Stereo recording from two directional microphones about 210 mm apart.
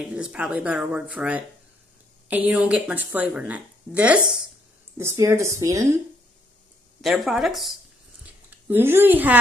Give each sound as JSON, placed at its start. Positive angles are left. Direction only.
{"t": 0.1, "sound": "speech", "side_deg": -5}
{"t": 7.0, "sound": "a woman's voice", "side_deg": 0}